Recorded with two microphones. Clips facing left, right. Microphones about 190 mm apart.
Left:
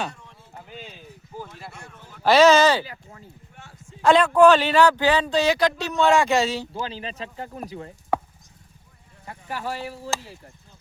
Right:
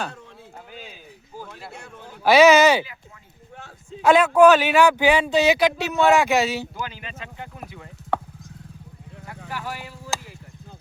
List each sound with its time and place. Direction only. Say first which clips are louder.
0.7 s clip-clop: left 2 dB; 5° right (ahead or behind)
1.8 s a sound: right 4 dB; 65° right (ahead or behind)
2.3 s speech: right 2 dB; 15° right (ahead or behind)
4.0 s speech: right 1 dB; 5° right (ahead or behind)
6.7 s speech: left 3 dB; 30° left (ahead or behind)
9.5 s speech: left 3 dB; 30° left (ahead or behind)